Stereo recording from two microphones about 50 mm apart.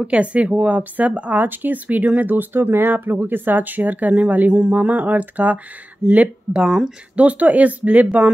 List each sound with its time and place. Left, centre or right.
0.0 s speech: right
1.4 s speech: right
6.2 s speech: centre
7.2 s speech: right